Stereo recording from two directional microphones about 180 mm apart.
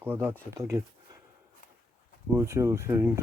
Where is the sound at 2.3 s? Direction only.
15° right (ahead or behind).